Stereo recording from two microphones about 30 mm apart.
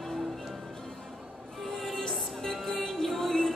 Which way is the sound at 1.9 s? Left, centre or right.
Centre.